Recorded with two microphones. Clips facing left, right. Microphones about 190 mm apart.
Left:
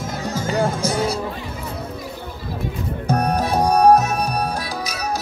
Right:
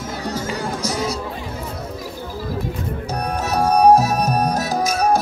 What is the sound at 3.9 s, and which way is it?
Music, 35° right (ahead or behind).